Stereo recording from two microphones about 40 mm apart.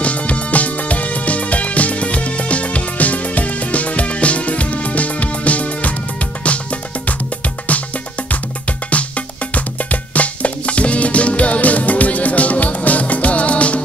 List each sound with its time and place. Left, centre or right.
0.0 s music: left